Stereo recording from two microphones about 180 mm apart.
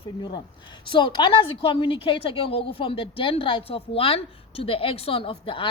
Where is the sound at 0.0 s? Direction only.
25° left (ahead or behind).